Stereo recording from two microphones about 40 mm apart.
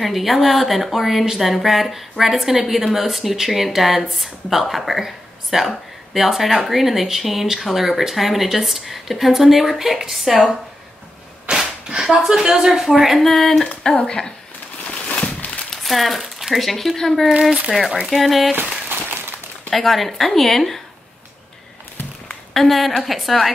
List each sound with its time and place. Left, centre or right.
0.0 s speech: centre
11.5 s a sound: right
12.0 s speech: centre
14.0 s speech: centre
15.2 s a sound: left
15.7 s speech: centre
18.6 s a sound: right
19.7 s speech: centre
22.5 s speech: centre